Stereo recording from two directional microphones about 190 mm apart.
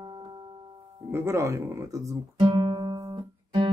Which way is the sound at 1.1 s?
15° right (ahead or behind).